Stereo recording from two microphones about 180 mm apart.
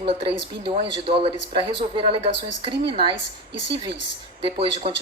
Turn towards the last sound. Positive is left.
turn(degrees=-30)  # may be behind; listen again after turning